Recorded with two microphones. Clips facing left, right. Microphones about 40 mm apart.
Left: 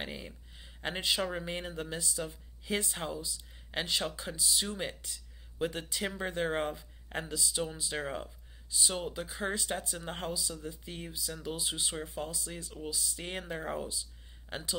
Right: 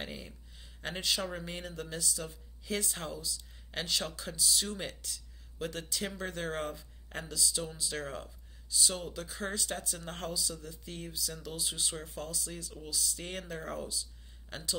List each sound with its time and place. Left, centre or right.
0.0 s speech: centre